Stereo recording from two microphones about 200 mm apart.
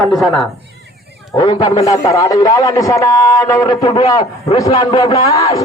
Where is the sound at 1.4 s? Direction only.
20° left (ahead or behind).